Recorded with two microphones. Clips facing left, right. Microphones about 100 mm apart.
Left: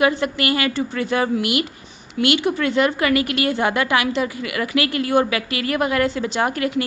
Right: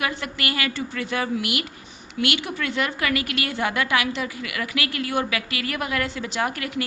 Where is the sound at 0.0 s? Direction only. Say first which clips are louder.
Left 9 dB; 25° left (ahead or behind).